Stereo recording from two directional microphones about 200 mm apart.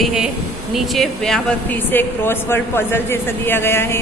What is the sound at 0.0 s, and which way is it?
A woman's voice, centre (ahead or behind).